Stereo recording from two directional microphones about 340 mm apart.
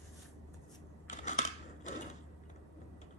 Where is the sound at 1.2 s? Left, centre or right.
Left.